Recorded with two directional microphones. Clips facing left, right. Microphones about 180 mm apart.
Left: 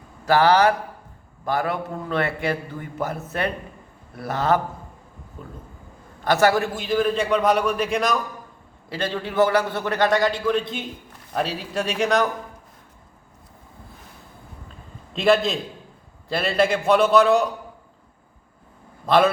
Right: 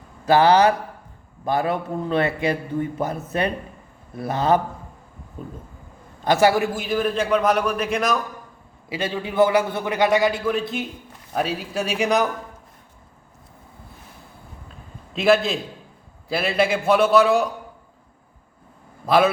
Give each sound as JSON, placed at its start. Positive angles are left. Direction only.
{"t": 0.3, "sound": "a man's voice", "side_deg": -20}
{"t": 6.2, "sound": "a man's voice", "side_deg": -15}
{"t": 15.1, "sound": "a man's voice", "side_deg": -5}
{"t": 19.0, "sound": "a man's voice", "side_deg": -5}